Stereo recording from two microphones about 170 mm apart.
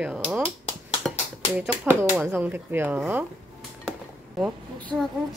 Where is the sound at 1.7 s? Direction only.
10° right (ahead or behind).